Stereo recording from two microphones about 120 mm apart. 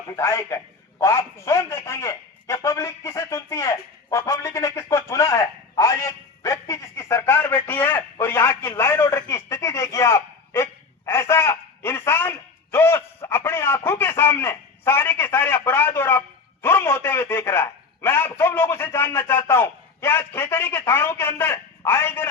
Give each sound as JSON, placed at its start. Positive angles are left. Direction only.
{"t": 0.2, "sound": "a man's voice", "side_deg": 25}